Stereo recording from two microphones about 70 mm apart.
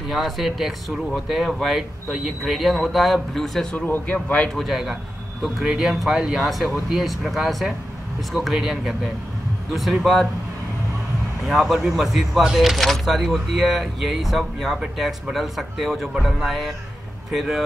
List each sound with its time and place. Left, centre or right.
0.1 s speech: centre
3.7 s a man's voice: left
4.6 s speech: centre
11.4 s speech: centre